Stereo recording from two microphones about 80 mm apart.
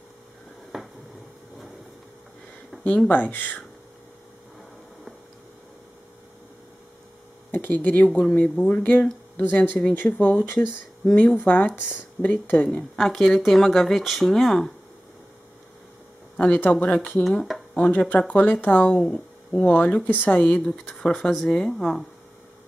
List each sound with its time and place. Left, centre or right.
0.7 s a sound: centre
2.8 s speech: centre
7.5 s speech: left
8.5 s speech: centre
8.8 s speech: left
12.9 s speech: centre
16.3 s speech: centre
17.2 s speech: centre
17.7 s speech: centre
18.9 s speech: centre
19.6 s speech: centre